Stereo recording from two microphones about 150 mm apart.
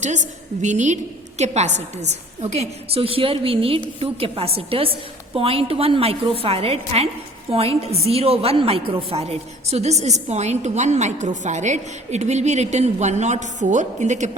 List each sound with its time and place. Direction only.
0.6 s a woman's voice: 55° right (ahead or behind)